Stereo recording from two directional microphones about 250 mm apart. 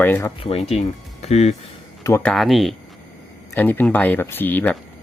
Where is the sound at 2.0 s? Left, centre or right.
Centre.